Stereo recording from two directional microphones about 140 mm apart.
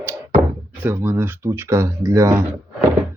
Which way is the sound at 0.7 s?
15° right (ahead or behind).